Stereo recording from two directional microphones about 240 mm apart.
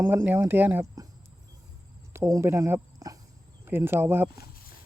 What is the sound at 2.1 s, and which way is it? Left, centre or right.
Speech, centre.